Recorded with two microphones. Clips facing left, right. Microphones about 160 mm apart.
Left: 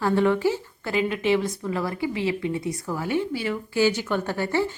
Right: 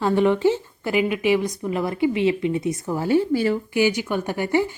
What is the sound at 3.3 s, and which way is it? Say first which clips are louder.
Speech: right 7 dB; 45° right (ahead or behind).